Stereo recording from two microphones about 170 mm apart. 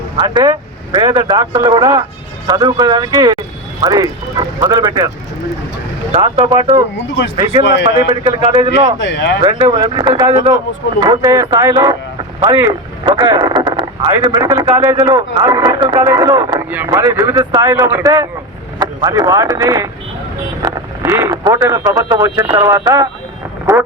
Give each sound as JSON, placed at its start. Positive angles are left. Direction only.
{"t": 0.2, "sound": "speech", "side_deg": -25}
{"t": 6.1, "sound": "speech", "side_deg": -35}
{"t": 7.6, "sound": "speech", "side_deg": 90}
{"t": 8.2, "sound": "speech", "side_deg": -30}
{"t": 9.0, "sound": "speech", "side_deg": 90}
{"t": 9.4, "sound": "speech", "side_deg": -25}